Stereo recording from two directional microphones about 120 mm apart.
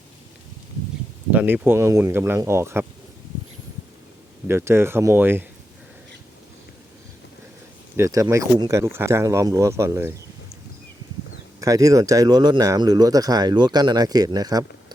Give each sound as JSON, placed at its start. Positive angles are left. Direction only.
{"t": 1.3, "sound": "speech", "side_deg": -15}
{"t": 4.4, "sound": "speech", "side_deg": -20}
{"t": 7.9, "sound": "speech", "side_deg": -25}
{"t": 11.6, "sound": "speech", "side_deg": -30}